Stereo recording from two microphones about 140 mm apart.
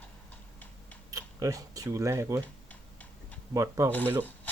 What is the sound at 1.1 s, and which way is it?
Speech, 25° right (ahead or behind).